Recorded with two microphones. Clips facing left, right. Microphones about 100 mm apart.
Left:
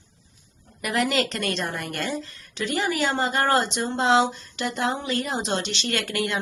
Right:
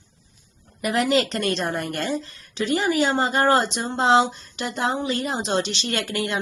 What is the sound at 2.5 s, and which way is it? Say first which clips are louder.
Speech: right 4 dB; 20° right (ahead or behind).